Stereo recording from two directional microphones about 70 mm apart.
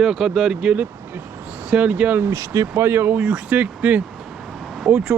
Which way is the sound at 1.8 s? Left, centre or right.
Right.